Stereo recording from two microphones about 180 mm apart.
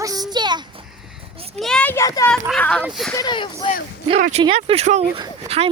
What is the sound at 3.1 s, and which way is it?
Speech, 25° left (ahead or behind).